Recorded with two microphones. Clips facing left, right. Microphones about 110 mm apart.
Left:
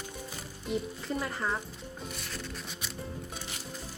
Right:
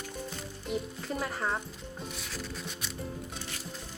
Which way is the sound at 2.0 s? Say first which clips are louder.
Right 1 dB; centre (ahead or behind).